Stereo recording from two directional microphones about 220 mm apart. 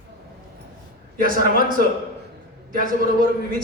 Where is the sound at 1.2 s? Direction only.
40° right (ahead or behind).